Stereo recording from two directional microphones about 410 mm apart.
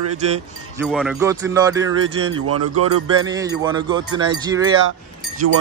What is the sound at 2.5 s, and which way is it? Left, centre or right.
Speech, right.